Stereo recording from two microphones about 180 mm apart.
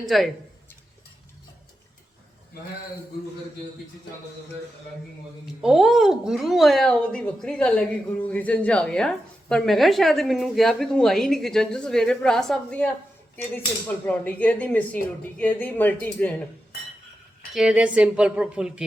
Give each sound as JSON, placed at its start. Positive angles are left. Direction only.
{"t": 0.0, "sound": "speech", "side_deg": 0}
{"t": 5.6, "sound": "speech", "side_deg": 0}
{"t": 17.5, "sound": "speech", "side_deg": -5}